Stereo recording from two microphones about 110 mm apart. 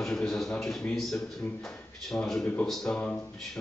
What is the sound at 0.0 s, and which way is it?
Speech, 5° left (ahead or behind).